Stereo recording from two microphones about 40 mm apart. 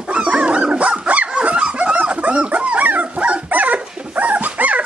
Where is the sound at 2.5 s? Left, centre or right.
Right.